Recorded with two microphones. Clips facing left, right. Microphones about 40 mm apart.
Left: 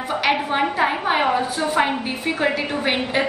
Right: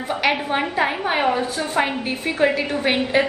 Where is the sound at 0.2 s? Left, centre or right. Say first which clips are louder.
Left 1 dB; centre.